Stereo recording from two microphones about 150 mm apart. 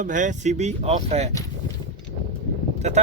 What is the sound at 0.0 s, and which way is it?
Speech, 55° right (ahead or behind).